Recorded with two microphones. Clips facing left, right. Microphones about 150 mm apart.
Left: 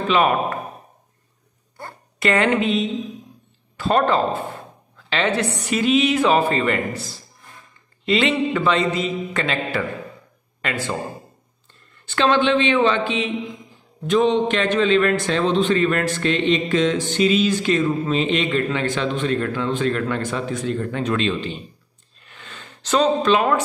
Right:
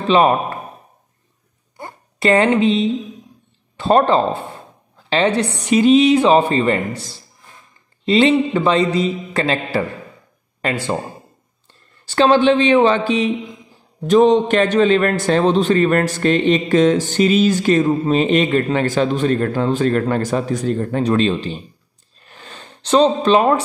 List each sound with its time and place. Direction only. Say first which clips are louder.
0.1 s a man's voice: right 5 dB; 30° right (ahead or behind)
2.1 s speech: right 4 dB; 30° right (ahead or behind)
4.5 s a sound: left 1 dB; 30° right (ahead or behind)
5.8 s a man's voice: right 6 dB; 30° right (ahead or behind)
8.0 s a man's voice: right 5 dB; 30° right (ahead or behind)
12.1 s a man's voice: right 5 dB; 35° right (ahead or behind)
22.2 s a sound: right 3 dB; 35° right (ahead or behind)